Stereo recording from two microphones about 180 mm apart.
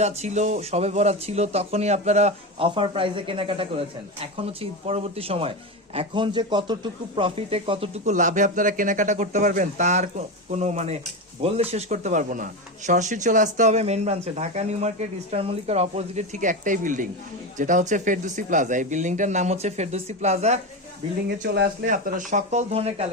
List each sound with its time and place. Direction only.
0.0 s a man's voice: 40° right (ahead or behind)
21.4 s speech: 70° right (ahead or behind)
21.8 s speech: 45° right (ahead or behind)